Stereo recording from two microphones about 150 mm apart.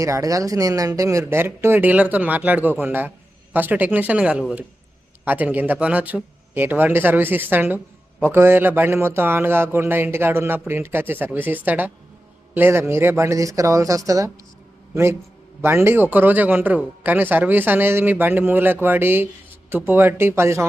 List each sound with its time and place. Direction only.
0.0 s a man's voice: 20° right (ahead or behind)
15.6 s a man's voice: 15° right (ahead or behind)